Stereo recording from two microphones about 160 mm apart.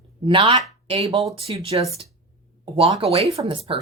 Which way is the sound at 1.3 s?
35° right (ahead or behind).